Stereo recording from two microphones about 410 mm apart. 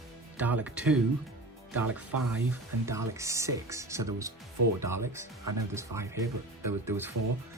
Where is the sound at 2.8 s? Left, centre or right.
Centre.